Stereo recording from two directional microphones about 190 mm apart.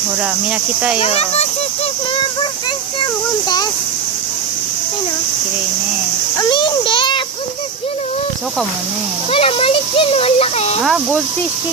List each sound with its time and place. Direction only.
0.9 s speech: 35° left (ahead or behind)
3.0 s a child's voice: 20° left (ahead or behind)
6.3 s a child's voice: 25° left (ahead or behind)
9.3 s speech: 30° left (ahead or behind)
10.8 s speech: centre (ahead or behind)